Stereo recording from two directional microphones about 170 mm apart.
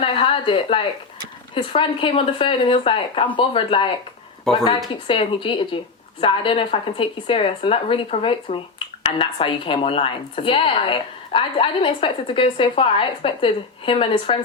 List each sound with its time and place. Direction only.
0.0 s speech: 30° left (ahead or behind)
4.5 s a woman's voice: 5° left (ahead or behind)
5.0 s speech: 30° left (ahead or behind)